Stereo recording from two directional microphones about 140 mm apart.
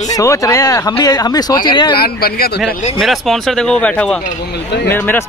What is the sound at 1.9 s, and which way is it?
Speech, 90° left.